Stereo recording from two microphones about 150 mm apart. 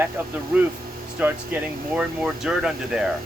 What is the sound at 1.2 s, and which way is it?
Speech, 10° right (ahead or behind).